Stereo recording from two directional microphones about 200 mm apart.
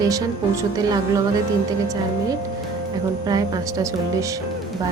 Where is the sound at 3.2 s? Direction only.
20° right (ahead or behind).